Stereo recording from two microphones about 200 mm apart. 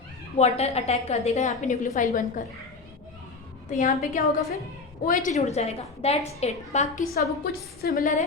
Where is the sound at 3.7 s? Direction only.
40° left (ahead or behind).